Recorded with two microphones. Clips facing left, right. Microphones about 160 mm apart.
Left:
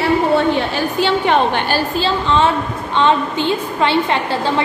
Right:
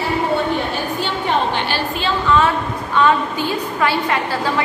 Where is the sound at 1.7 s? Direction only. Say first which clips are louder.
Left 3 dB; 35° left (ahead or behind).